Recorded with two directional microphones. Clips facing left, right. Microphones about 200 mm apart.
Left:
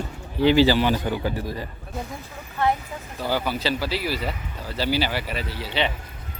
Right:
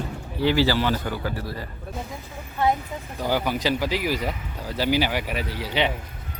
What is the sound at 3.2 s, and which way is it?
Speech, 15° right (ahead or behind).